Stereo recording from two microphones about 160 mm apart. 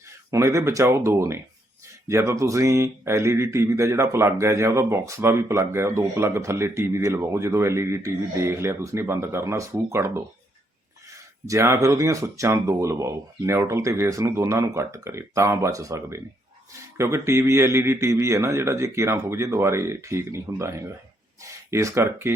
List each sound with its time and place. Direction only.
0.3 s speech: 20° right (ahead or behind)
11.4 s speech: 20° right (ahead or behind)